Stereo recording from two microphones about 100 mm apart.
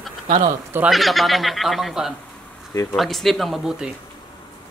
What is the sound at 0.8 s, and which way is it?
Speech, centre (ahead or behind).